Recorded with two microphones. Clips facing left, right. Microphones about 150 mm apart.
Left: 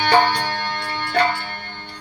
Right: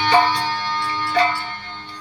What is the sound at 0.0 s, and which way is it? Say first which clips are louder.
Music: even; 60° left (ahead or behind).